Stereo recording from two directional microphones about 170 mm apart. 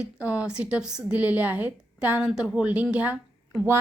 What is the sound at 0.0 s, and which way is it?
A woman's voice, 10° right (ahead or behind).